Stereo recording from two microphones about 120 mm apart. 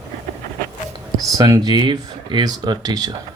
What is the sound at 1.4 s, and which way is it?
Speech, 30° right (ahead or behind).